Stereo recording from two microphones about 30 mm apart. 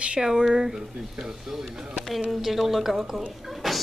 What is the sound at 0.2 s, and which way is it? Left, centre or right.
Speech, centre.